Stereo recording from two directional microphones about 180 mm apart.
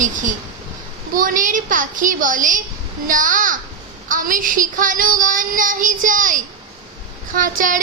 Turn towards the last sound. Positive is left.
turn(degrees=-50)  # may be behind; listen again after turning